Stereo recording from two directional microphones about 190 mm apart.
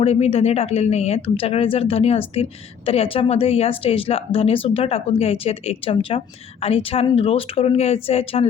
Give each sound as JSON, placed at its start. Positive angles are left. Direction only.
{"t": 0.0, "sound": "speech", "side_deg": 30}